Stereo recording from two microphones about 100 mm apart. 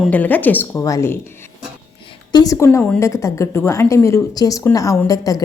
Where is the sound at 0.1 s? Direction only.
15° left (ahead or behind).